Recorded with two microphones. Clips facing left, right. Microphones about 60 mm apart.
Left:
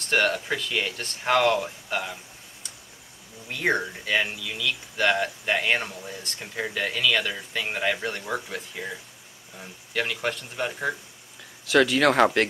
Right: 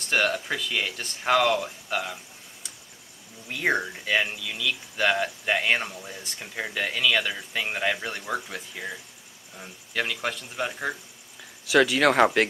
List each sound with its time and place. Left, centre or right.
0.0 s speech: centre
3.5 s speech: centre